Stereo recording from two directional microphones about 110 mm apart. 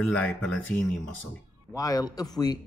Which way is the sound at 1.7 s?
30° left (ahead or behind).